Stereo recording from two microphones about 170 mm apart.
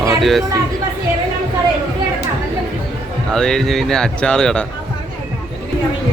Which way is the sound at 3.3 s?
5° left (ahead or behind).